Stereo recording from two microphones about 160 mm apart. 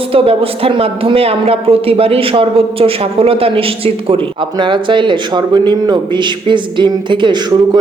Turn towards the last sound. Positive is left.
turn(degrees=-30)  # may be behind; listen again after turning